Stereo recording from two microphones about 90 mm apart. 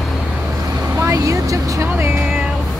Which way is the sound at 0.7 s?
35° right (ahead or behind).